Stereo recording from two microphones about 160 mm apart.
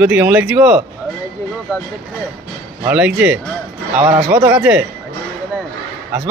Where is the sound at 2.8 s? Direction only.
10° right (ahead or behind).